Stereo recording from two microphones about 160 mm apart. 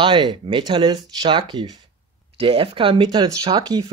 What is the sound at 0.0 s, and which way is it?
Speech, 30° right (ahead or behind).